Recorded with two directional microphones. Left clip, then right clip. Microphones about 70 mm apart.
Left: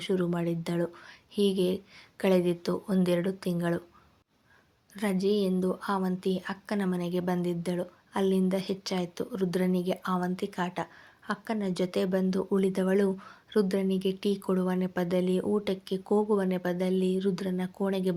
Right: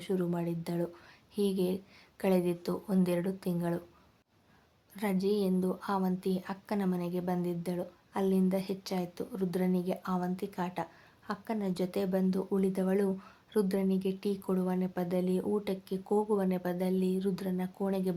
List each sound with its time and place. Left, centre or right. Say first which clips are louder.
0.0 s a woman's voice: left 4 dB; left
4.9 s speech: left 3 dB; left
7.1 s a woman's voice: left 4 dB; left